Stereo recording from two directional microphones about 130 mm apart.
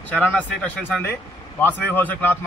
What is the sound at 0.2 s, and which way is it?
A man's voice, 10° left (ahead or behind).